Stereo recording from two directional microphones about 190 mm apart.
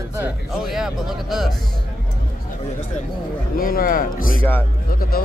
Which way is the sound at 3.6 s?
50° left (ahead or behind).